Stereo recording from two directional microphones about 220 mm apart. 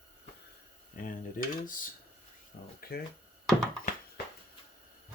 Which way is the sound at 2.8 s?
45° left (ahead or behind).